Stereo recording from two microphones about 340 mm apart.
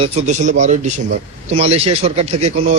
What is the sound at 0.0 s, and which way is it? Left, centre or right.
A man's voice, centre.